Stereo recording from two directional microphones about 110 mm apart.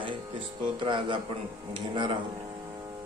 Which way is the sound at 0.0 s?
50° right (ahead or behind).